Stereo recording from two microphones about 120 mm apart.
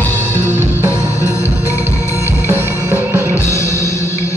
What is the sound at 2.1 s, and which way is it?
Music, 20° right (ahead or behind).